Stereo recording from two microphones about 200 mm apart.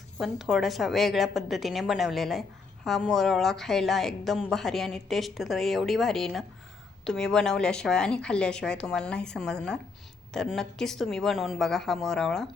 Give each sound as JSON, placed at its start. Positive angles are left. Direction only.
{"t": 0.2, "sound": "a woman's voice", "side_deg": 0}